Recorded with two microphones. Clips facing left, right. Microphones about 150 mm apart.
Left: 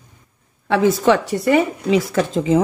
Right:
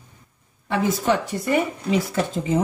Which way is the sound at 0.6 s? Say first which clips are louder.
Left 6 dB; 90° left.